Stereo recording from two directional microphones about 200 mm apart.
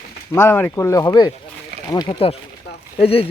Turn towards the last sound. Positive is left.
turn(degrees=30)  # may be behind; listen again after turning